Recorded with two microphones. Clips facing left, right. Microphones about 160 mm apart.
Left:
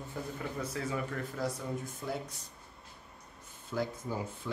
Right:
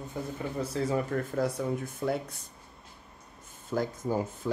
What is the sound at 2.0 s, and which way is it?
Speech, 60° right (ahead or behind).